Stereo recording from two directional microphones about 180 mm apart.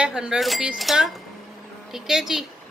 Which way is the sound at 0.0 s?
5° right (ahead or behind).